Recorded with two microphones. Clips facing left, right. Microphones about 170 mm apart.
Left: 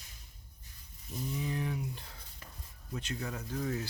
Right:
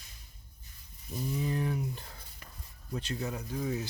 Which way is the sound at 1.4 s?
40° right (ahead or behind).